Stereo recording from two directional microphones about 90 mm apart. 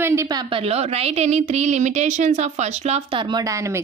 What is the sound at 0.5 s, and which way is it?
Speech, 90° right.